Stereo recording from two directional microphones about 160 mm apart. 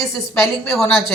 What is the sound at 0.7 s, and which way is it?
Speech, centre (ahead or behind).